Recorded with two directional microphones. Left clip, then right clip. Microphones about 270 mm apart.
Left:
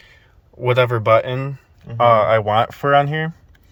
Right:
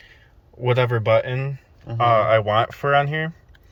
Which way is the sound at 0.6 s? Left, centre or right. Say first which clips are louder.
Left 4 dB; centre.